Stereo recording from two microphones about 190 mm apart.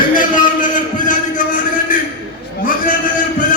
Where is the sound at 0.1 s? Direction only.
45° left (ahead or behind).